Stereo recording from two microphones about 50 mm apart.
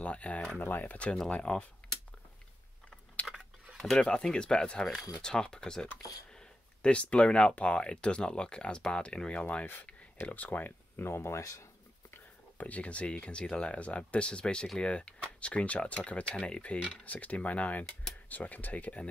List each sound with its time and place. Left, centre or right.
0.0 s speech: left
0.6 s speech: left
1.3 s speech: left
3.2 s a sound: left
4.0 s speech: centre; by 11.1 s left
11.1 s speech: left
12.5 s speech: left